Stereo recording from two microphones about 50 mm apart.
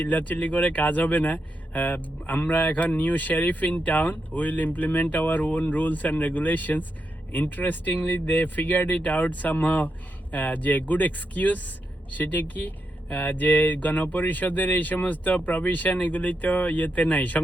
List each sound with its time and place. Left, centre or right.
0.0 s speech: left